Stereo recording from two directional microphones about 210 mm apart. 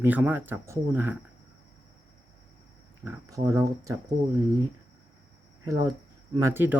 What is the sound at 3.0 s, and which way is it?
Speech, 10° right (ahead or behind).